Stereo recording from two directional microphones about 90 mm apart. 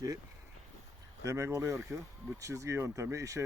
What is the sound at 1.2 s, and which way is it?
Speech, 30° right (ahead or behind).